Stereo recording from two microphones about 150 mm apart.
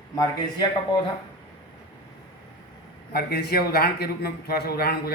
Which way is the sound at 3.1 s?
90° left.